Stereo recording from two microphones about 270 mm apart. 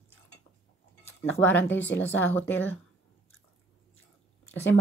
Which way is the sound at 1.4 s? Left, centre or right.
Centre.